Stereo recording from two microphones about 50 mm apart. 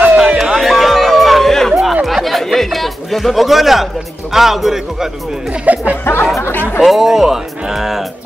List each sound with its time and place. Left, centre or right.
0.2 s a sound: centre
1.7 s music: centre
2.0 s a sound: centre
4.3 s a man's voice: centre
5.7 s speech: right
6.1 s speech: left
6.8 s speech: centre